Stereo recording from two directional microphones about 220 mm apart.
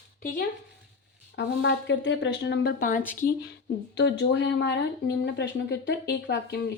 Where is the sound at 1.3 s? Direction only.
55° left (ahead or behind).